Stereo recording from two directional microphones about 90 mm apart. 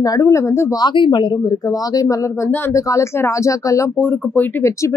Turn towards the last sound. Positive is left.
turn(degrees=20)  # may be behind; listen again after turning